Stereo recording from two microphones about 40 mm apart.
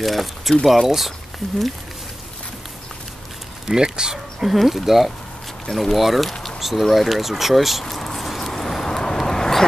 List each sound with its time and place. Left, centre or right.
0.0 s speech: centre
3.6 s speech: centre
4.5 s speech: centre
5.7 s speech: centre
5.9 s speech: centre
7.9 s a sound: centre
8.5 s vehicle: centre